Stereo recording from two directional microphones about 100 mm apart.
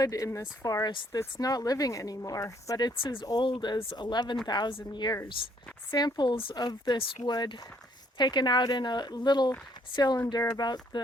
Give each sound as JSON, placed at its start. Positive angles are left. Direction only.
{"t": 0.0, "sound": "a woman's voice", "side_deg": 35}
{"t": 2.9, "sound": "speech", "side_deg": 60}
{"t": 3.2, "sound": "speech", "side_deg": 45}
{"t": 3.9, "sound": "speech", "side_deg": 45}
{"t": 5.4, "sound": "speech", "side_deg": 60}
{"t": 5.9, "sound": "speech", "side_deg": 45}
{"t": 6.3, "sound": "speech", "side_deg": 65}
{"t": 6.6, "sound": "speech", "side_deg": 45}